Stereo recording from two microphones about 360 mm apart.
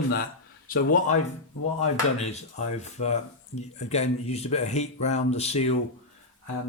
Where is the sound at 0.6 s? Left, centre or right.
Left.